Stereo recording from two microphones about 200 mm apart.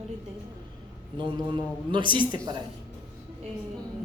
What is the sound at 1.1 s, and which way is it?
Speech, 25° right (ahead or behind).